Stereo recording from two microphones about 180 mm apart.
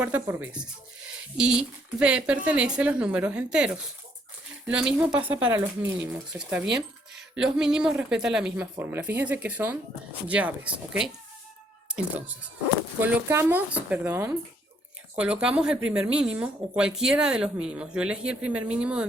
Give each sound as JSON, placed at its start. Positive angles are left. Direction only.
{"t": 0.0, "sound": "speech", "side_deg": -10}